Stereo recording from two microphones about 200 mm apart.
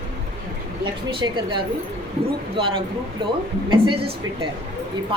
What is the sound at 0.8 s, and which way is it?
Speech, 25° right (ahead or behind).